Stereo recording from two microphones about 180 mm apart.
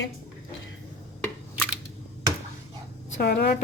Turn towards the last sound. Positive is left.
turn(degrees=65)  # may be behind; listen again after turning